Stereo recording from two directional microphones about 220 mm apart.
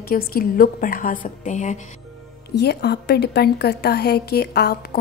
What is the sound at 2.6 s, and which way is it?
A woman's voice, 50° left (ahead or behind).